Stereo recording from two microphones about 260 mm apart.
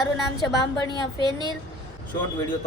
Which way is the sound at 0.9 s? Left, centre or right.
Centre.